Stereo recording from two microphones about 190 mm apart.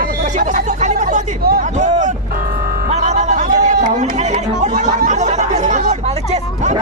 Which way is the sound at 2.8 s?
35° right (ahead or behind).